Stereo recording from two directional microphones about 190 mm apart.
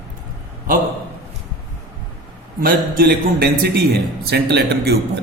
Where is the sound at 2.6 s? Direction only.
50° right (ahead or behind).